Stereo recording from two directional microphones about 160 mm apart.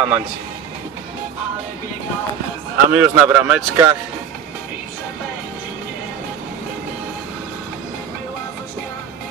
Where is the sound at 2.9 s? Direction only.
10° right (ahead or behind).